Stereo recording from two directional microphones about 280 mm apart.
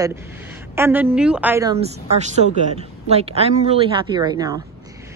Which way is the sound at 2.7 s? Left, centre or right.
Right.